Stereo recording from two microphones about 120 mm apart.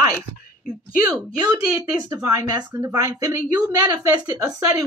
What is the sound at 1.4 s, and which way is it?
A woman's voice, 35° right (ahead or behind).